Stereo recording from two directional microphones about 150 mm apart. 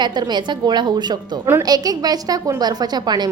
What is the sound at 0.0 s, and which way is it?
A woman's voice, 30° right (ahead or behind).